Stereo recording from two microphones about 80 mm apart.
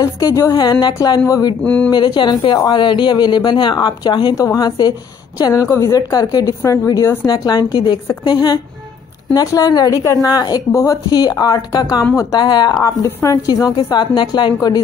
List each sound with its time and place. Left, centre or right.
0.0 s a woman's voice: left
0.9 s a woman's voice: left
1.6 s speech: centre
1.9 s a woman's voice: left
2.7 s a woman's voice: left
4.4 s a woman's voice: left
5.5 s a woman's voice: left
9.3 s a woman's voice: left
10.7 s speech: left
11.1 s a woman's voice: left
12.4 s a woman's voice: left
12.8 s a woman's voice: left
13.7 s a woman's voice: left